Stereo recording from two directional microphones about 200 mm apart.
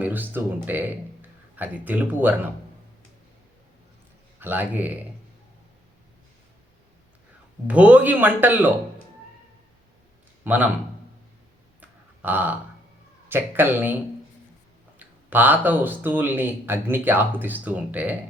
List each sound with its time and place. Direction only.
0.0 s speech: 10° right (ahead or behind)
4.4 s speech: 10° right (ahead or behind)
7.7 s speech: 5° right (ahead or behind)
10.4 s a man's voice: 10° right (ahead or behind)
11.8 s burping: 10° right (ahead or behind)
13.2 s speech: 10° right (ahead or behind)
14.9 s speech: 10° right (ahead or behind)